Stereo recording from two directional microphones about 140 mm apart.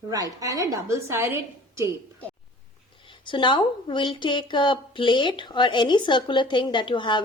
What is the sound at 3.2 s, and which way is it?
Speech, 35° left (ahead or behind).